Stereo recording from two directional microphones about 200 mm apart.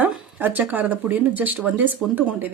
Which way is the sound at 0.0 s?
10° right (ahead or behind).